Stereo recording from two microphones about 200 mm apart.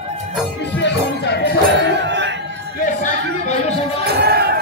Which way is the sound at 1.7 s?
60° right (ahead or behind).